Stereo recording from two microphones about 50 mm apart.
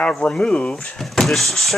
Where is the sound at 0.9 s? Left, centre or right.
Centre.